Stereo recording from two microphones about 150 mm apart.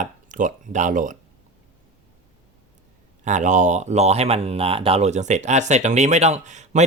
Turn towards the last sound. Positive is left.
turn(degrees=-50)  # may be behind; listen again after turning